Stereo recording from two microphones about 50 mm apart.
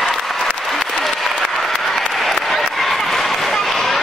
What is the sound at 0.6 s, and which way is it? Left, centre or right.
Applause, centre.